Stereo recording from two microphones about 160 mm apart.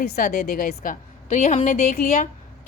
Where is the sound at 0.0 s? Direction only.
65° left (ahead or behind).